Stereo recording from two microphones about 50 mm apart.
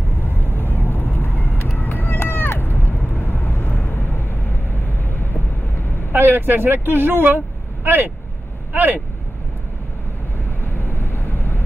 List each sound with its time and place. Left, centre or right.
0.2 s vehicle: left
6.1 s speech: right
10.6 s vehicle: left